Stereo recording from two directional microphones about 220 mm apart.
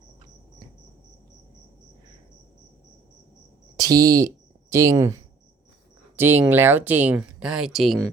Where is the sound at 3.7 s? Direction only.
15° right (ahead or behind).